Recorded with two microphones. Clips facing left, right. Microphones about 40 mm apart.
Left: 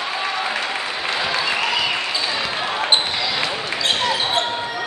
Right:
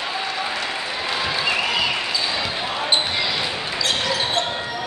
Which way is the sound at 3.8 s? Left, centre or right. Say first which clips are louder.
Left 2 dB; left.